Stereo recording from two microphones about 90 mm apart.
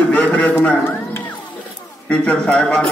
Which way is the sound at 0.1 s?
15° left (ahead or behind).